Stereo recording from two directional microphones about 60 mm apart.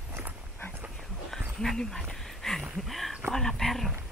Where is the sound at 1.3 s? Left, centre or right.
Centre.